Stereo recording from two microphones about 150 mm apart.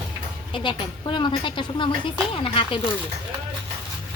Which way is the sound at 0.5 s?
35° left (ahead or behind).